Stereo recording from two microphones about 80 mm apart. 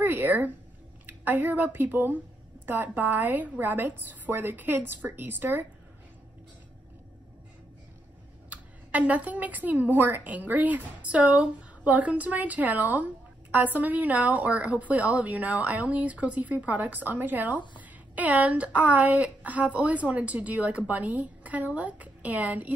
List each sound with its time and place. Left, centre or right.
0.0 s a woman's voice: right
8.5 s a woman's voice: centre